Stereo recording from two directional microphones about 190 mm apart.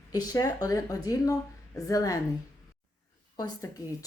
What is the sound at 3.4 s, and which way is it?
Speech, 20° left (ahead or behind).